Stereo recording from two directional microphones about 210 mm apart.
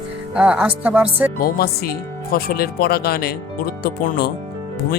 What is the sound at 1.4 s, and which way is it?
Speech, 45° left (ahead or behind).